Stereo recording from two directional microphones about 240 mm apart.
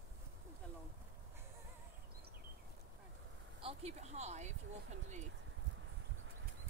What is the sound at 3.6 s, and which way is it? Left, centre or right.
Speech, right.